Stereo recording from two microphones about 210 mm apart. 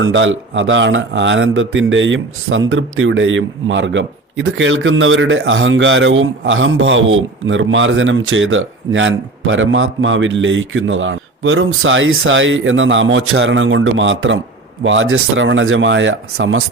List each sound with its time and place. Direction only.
0.0 s speech: 65° right (ahead or behind)